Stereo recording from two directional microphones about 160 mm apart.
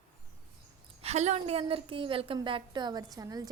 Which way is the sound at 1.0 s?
45° right (ahead or behind).